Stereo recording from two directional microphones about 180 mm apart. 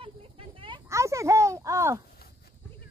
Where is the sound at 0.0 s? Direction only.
30° right (ahead or behind).